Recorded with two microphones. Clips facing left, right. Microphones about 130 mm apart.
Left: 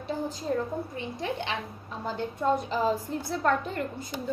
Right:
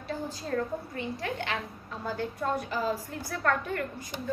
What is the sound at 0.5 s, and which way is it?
A woman's voice, 20° left (ahead or behind).